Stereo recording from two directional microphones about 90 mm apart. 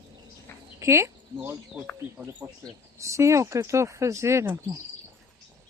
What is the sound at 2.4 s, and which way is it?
Speech, 30° right (ahead or behind).